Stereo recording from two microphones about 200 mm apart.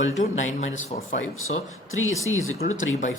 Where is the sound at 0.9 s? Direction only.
30° left (ahead or behind).